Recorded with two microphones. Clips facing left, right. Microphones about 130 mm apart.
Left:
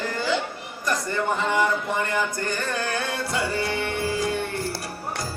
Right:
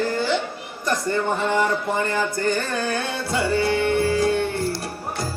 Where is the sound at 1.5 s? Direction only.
30° right (ahead or behind).